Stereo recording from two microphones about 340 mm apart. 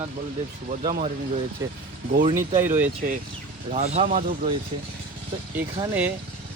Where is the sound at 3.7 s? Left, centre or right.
Centre.